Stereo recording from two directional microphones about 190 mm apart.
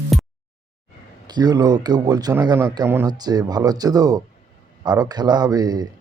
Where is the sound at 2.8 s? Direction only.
10° right (ahead or behind).